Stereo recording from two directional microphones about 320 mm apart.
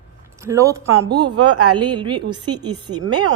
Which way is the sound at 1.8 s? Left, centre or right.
Centre.